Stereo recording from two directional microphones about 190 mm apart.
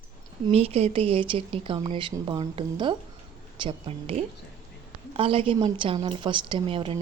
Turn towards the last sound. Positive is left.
turn(degrees=-30)  # may be behind; listen again after turning